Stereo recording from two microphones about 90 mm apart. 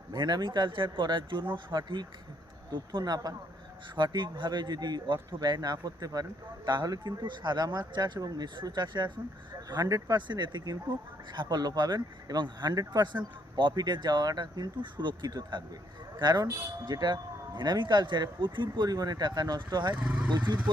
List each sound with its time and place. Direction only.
0.1 s speech: 55° right (ahead or behind)
9.6 s speech: 45° right (ahead or behind)
10.2 s speech: 60° right (ahead or behind)
20.0 s speech: 15° right (ahead or behind)
20.3 s speech: 55° right (ahead or behind)